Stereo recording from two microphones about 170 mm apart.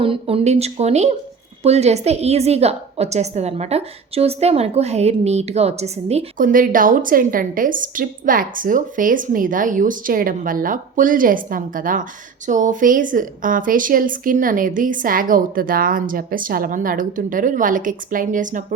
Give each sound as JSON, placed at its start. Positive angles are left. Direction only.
{"t": 0.0, "sound": "a woman's voice", "side_deg": -35}
{"t": 6.3, "sound": "a woman's voice", "side_deg": -55}